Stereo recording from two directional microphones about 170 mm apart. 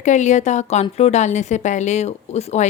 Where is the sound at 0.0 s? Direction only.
45° left (ahead or behind).